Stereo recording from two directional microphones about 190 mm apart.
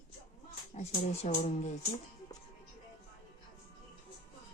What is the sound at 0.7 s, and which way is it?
Speech, 35° left (ahead or behind).